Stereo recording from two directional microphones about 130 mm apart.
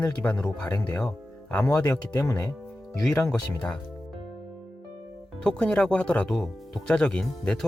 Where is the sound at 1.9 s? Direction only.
25° left (ahead or behind).